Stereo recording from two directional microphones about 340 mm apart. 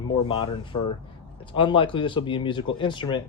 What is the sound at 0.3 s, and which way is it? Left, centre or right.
Speech, centre.